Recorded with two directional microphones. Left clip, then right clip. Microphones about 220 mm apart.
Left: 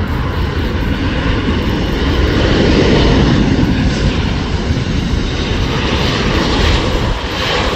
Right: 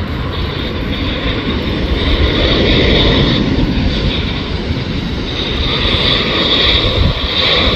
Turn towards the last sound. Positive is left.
turn(degrees=35)  # may be behind; listen again after turning